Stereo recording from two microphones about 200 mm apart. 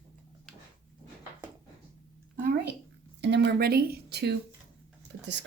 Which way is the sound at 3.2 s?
60° right (ahead or behind).